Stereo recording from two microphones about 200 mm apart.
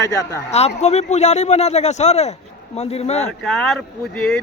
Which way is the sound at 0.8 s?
35° left (ahead or behind).